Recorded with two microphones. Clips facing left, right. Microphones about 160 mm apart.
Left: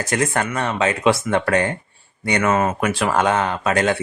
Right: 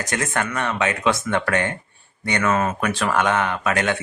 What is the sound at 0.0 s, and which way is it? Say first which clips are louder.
Speech: left 4 dB; 30° left (ahead or behind).